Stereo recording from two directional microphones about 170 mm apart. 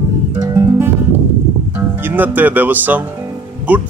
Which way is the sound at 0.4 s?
15° right (ahead or behind).